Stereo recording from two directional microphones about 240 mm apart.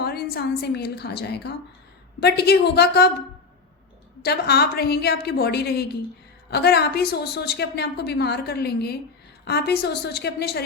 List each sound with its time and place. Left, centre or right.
0.0 s a woman's voice: left